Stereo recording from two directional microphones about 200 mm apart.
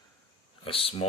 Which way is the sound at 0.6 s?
25° left (ahead or behind).